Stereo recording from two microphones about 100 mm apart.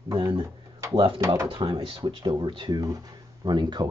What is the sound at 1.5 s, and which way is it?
Speech, 60° right (ahead or behind).